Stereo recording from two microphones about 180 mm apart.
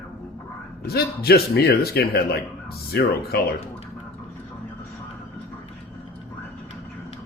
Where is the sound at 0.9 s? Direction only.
60° left (ahead or behind).